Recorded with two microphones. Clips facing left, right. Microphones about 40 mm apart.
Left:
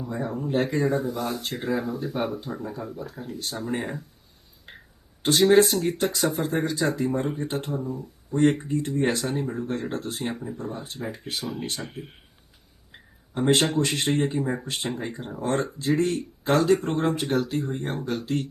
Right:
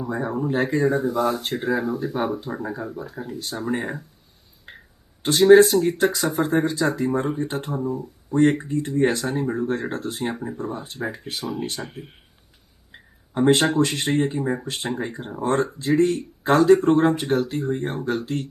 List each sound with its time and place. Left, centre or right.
0.1 s speech: centre
5.2 s speech: centre
7.9 s speech: right
8.4 s speech: centre
10.3 s speech: centre
10.6 s speech: centre
15.2 s speech: centre
15.9 s speech: centre